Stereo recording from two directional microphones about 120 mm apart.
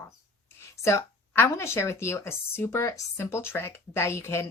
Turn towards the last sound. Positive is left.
turn(degrees=25)  # may be behind; listen again after turning